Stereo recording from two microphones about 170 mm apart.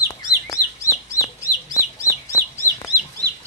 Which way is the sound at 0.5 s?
20° left (ahead or behind).